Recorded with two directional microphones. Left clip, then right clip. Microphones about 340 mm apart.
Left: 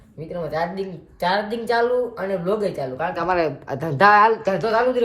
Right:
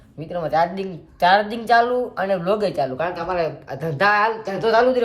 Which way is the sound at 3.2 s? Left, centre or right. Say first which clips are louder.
Left 2 dB; left.